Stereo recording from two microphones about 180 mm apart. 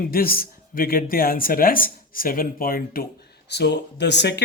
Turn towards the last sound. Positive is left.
turn(degrees=70)  # may be behind; listen again after turning